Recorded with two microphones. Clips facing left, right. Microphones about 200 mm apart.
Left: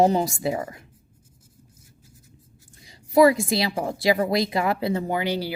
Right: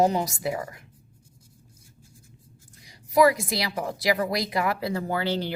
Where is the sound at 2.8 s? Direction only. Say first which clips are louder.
Left 3 dB; 25° left (ahead or behind); by 5.6 s 10° left (ahead or behind).